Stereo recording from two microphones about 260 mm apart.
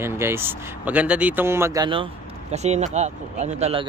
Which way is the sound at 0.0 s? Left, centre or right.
Centre.